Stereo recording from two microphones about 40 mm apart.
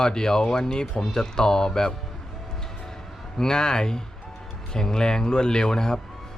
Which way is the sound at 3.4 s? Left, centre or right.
Centre.